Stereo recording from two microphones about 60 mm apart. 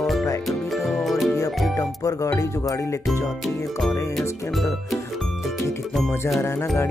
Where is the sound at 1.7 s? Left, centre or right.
Left.